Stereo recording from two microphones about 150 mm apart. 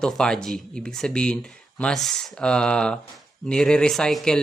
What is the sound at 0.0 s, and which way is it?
Speech, 5° left (ahead or behind).